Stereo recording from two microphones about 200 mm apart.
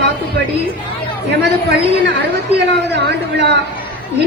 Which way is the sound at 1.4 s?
60° right (ahead or behind).